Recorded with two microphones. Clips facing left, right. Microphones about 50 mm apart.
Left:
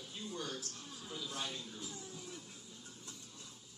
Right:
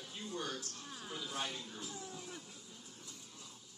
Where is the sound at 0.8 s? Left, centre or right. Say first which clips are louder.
Right 2 dB; right.